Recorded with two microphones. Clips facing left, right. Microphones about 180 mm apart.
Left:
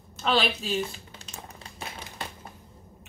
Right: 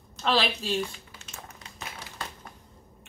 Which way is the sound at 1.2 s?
35° left (ahead or behind).